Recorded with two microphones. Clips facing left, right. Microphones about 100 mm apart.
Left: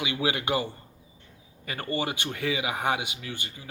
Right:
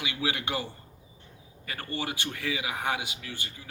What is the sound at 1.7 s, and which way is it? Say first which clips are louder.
Speech: left 4 dB; 15° left (ahead or behind).